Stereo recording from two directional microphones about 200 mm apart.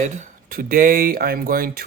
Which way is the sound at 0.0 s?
40° right (ahead or behind).